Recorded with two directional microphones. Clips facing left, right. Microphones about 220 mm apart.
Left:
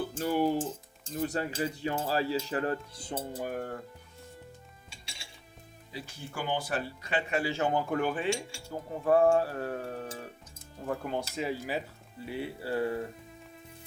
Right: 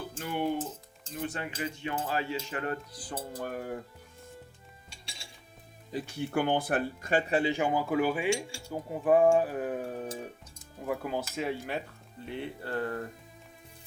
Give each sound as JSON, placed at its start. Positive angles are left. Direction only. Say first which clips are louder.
{"t": 0.1, "sound": "speech", "louder": "left 2 dB", "side_deg": 40}
{"t": 1.1, "sound": "cutlery", "louder": "left 4 dB", "side_deg": 40}
{"t": 3.3, "sound": "speech", "louder": "even", "side_deg": 10}
{"t": 5.9, "sound": "speech", "louder": "right 10 dB", "side_deg": -55}
{"t": 7.5, "sound": "speech", "louder": "right 1 dB", "side_deg": -10}
{"t": 10.8, "sound": "speech", "louder": "right 1 dB", "side_deg": -5}